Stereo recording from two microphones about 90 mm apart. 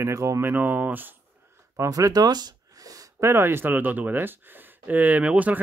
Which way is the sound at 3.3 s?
25° right (ahead or behind).